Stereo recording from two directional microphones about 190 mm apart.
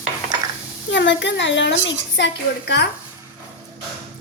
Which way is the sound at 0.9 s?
70° left (ahead or behind).